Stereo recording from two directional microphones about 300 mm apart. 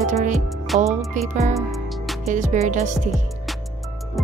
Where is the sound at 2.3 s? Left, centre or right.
Right.